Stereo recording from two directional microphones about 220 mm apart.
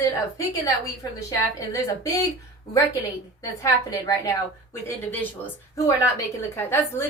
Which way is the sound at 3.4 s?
15° left (ahead or behind).